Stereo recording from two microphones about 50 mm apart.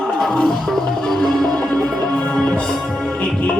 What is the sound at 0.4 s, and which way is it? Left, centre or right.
Music, centre.